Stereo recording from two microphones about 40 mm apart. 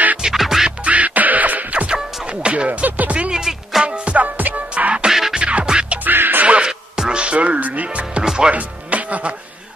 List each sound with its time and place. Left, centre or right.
0.2 s music: centre
0.7 s music: right
2.2 s music: right
3.3 s music: centre
3.8 s music: right
4.4 s music: right
4.7 s music: right
6.0 s music: right
6.4 s music: right
6.7 s music: centre
7.2 s music: right
8.2 s music: centre
8.5 s music: right